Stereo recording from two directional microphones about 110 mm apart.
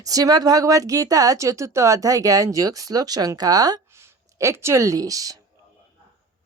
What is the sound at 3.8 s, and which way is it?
Speech, 25° right (ahead or behind).